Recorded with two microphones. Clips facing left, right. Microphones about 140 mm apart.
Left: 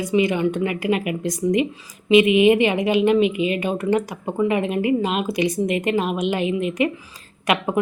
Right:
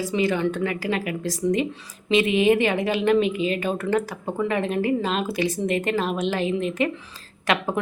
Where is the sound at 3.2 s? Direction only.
35° right (ahead or behind).